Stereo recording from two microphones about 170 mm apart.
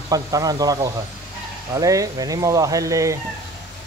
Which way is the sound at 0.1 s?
20° right (ahead or behind).